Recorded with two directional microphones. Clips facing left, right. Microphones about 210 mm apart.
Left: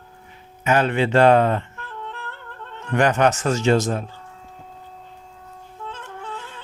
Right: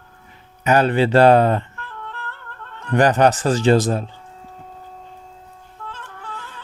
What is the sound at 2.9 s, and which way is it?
A man's voice, 35° right (ahead or behind).